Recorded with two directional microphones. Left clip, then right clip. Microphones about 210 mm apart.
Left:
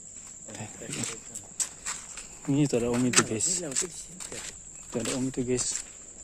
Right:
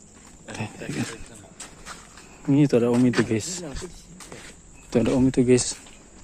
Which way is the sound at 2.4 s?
Centre (ahead or behind).